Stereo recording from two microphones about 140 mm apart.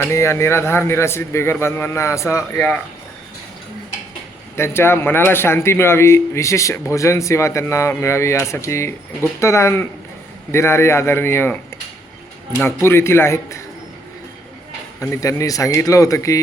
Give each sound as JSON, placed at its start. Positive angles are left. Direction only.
{"t": 0.0, "sound": "a man's voice", "side_deg": 20}
{"t": 2.6, "sound": "speech", "side_deg": 5}
{"t": 4.5, "sound": "a man's voice", "side_deg": 20}
{"t": 12.5, "sound": "a man's voice", "side_deg": 15}
{"t": 15.0, "sound": "a man's voice", "side_deg": 20}